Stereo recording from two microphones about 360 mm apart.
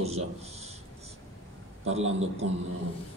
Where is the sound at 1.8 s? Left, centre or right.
Centre.